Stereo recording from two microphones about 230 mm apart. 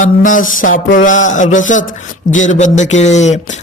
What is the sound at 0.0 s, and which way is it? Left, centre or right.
A man's voice, left.